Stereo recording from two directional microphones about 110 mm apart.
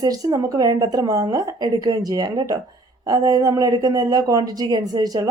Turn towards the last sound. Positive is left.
turn(degrees=-35)  # may be behind; listen again after turning